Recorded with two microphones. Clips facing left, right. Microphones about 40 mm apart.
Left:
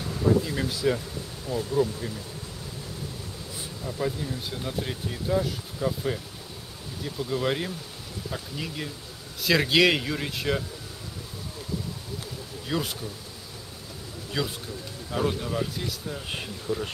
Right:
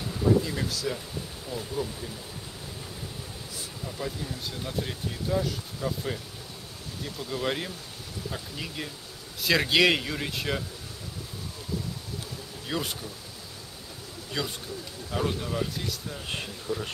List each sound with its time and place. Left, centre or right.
0.0 s speech: centre
0.7 s speech: left
1.5 s speech: centre
3.8 s speech: centre
12.6 s speech: centre
14.4 s speech: centre